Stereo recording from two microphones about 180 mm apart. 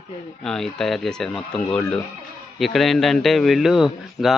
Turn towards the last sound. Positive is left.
turn(degrees=0)  # may be behind; listen again after turning